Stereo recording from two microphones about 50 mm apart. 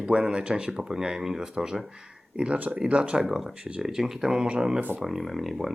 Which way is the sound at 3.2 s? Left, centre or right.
Centre.